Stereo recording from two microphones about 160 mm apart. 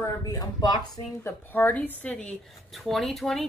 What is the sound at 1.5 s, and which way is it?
Speech, 10° left (ahead or behind).